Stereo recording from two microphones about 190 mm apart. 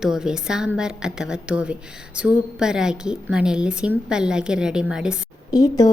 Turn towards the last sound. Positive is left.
turn(degrees=20)  # may be behind; listen again after turning